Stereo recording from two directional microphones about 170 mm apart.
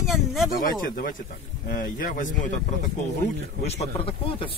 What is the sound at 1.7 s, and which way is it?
Speech, 55° left (ahead or behind).